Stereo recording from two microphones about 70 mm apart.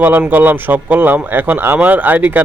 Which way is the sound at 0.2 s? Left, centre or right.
Right.